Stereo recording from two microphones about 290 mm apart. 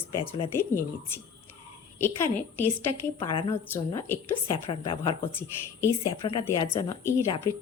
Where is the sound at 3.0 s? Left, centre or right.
Centre.